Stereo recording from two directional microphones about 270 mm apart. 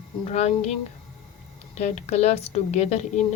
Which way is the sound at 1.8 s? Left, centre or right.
Left.